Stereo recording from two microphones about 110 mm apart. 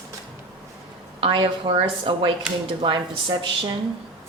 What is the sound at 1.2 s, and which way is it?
A woman's voice, 45° right (ahead or behind).